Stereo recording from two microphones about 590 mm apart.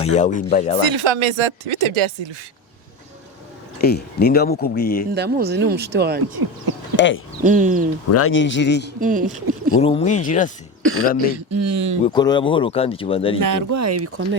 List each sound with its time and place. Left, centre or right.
0.0 s speech: centre
0.8 s speech: right
3.8 s speech: centre
5.1 s speech: centre
6.9 s speech: centre
7.4 s speech: centre
8.1 s speech: left
9.0 s speech: centre
9.8 s speech: centre
11.5 s speech: right
12.0 s speech: centre
13.4 s speech: right